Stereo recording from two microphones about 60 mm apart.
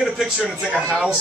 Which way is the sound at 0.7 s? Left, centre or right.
Centre.